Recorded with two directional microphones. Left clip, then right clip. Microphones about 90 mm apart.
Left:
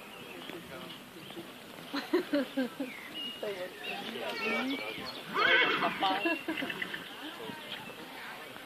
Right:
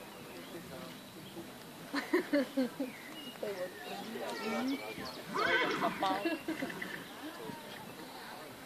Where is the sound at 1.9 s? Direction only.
40° right (ahead or behind).